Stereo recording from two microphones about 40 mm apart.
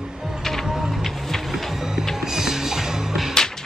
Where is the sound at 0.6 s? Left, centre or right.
Centre.